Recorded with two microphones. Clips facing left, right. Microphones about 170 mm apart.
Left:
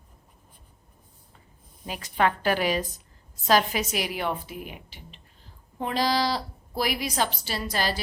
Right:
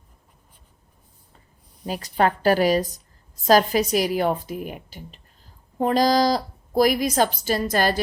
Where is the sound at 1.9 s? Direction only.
35° right (ahead or behind).